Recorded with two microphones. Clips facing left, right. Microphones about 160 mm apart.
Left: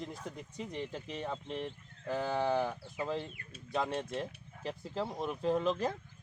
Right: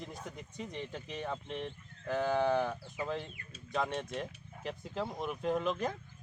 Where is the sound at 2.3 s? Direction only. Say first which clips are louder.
Even; 5° left (ahead or behind).